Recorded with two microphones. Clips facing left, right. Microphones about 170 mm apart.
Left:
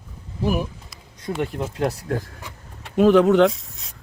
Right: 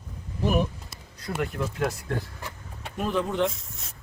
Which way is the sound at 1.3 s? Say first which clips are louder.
Left 4 dB; 20° left (ahead or behind).